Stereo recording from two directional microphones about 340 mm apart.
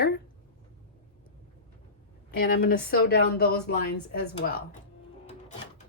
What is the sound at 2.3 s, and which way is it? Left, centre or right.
Speech, left.